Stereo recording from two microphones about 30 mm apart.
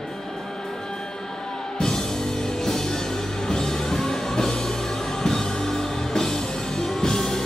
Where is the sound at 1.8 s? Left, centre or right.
Centre.